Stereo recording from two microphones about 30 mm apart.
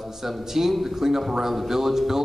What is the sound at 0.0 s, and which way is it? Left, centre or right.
A man's voice, centre.